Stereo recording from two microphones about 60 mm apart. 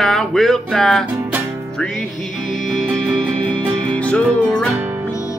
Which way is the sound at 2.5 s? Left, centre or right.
Centre.